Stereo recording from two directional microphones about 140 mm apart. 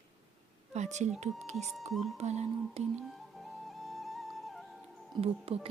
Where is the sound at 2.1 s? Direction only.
50° right (ahead or behind).